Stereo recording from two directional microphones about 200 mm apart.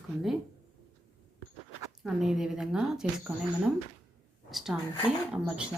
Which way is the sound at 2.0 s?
Centre (ahead or behind).